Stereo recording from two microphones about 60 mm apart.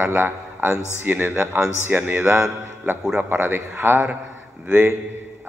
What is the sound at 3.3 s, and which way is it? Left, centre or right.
Speech, right.